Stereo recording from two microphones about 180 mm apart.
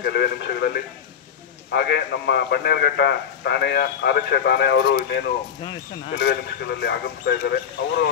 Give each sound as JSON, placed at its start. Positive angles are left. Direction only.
{"t": 0.0, "sound": "a man's voice", "side_deg": 60}
{"t": 5.6, "sound": "speech", "side_deg": 25}
{"t": 6.2, "sound": "speech", "side_deg": 70}